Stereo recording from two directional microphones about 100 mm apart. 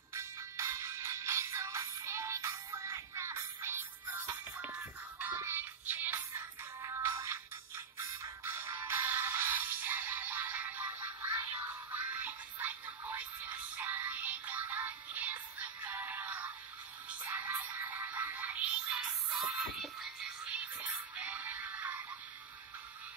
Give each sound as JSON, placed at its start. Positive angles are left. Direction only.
{"t": 0.1, "sound": "music", "side_deg": -30}
{"t": 5.2, "sound": "music", "side_deg": -20}
{"t": 19.3, "sound": "music", "side_deg": 0}